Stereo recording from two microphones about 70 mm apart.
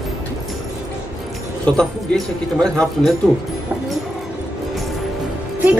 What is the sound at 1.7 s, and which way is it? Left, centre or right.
Speech, centre.